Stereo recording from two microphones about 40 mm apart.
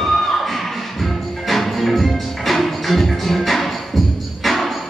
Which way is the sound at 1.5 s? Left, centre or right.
Centre.